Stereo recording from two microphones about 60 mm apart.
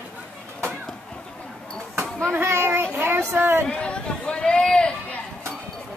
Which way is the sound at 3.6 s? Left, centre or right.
Centre.